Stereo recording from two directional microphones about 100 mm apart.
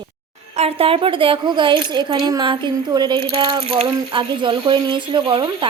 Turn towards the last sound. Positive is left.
turn(degrees=-55)  # may be behind; listen again after turning